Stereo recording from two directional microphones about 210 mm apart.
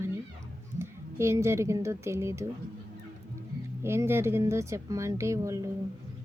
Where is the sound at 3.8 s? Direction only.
10° right (ahead or behind).